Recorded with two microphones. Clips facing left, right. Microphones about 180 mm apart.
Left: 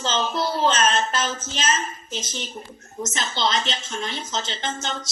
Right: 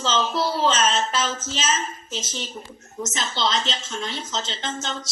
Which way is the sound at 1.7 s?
5° left (ahead or behind).